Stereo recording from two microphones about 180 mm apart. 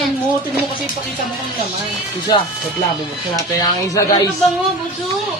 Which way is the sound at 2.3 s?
25° left (ahead or behind).